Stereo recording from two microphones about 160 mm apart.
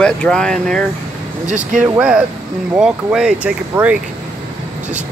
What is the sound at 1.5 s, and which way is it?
Speech, 50° right (ahead or behind).